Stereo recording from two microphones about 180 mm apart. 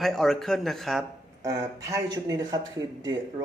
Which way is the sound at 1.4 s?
15° right (ahead or behind).